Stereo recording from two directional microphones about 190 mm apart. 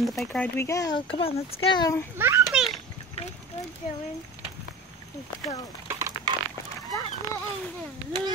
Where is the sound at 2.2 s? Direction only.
10° right (ahead or behind).